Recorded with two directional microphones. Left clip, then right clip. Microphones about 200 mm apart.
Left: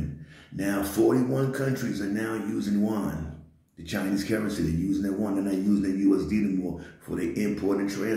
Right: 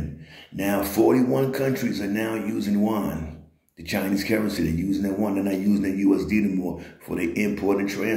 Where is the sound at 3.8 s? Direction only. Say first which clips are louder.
Right 4 dB; 10° left (ahead or behind).